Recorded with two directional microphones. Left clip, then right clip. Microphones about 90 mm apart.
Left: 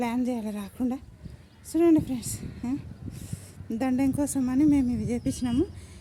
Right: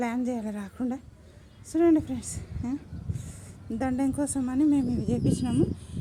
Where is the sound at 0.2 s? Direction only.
15° left (ahead or behind).